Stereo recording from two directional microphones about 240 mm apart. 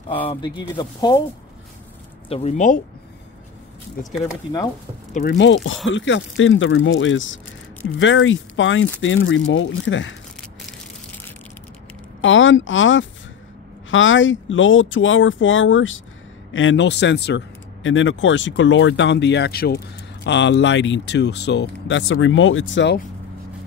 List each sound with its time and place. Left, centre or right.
0.3 s speech: centre
2.2 s speech: left
5.1 s speech: left
12.2 s speech: left